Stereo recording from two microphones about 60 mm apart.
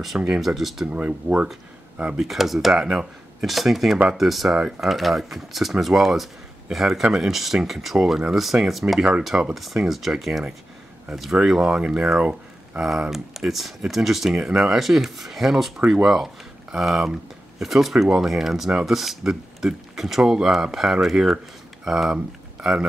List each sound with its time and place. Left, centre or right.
0.3 s speech: centre
0.8 s speech: right
2.1 s speech: centre